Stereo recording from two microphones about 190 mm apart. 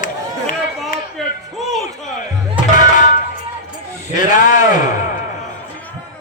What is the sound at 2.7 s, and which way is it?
Music, 40° left (ahead or behind).